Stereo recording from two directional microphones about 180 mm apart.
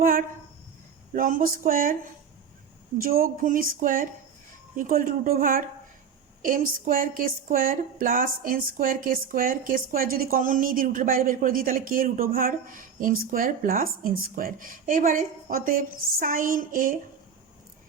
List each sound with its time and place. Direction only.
1.1 s speech: 50° right (ahead or behind)
3.0 s speech: 55° right (ahead or behind)